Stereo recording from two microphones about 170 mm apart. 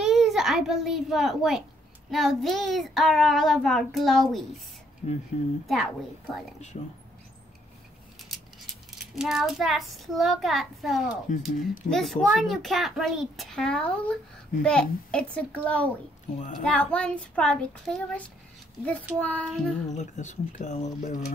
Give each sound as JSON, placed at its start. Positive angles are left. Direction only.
{"t": 0.0, "sound": "a child's voice", "side_deg": 0}
{"t": 5.0, "sound": "speech", "side_deg": 40}
{"t": 6.7, "sound": "speech", "side_deg": 40}
{"t": 8.9, "sound": "a child's voice", "side_deg": 0}
{"t": 16.3, "sound": "speech", "side_deg": 45}
{"t": 16.6, "sound": "a child's voice", "side_deg": 5}
{"t": 19.9, "sound": "speech", "side_deg": 45}